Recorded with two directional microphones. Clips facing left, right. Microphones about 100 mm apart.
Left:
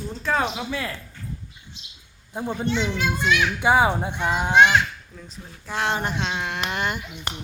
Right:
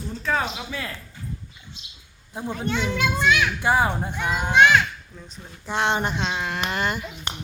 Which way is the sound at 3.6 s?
10° left (ahead or behind).